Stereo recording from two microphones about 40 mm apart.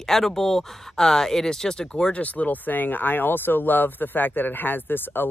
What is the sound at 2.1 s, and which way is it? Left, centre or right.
Speech, left.